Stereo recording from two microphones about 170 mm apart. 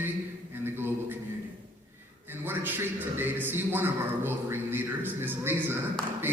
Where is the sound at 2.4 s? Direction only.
10° right (ahead or behind).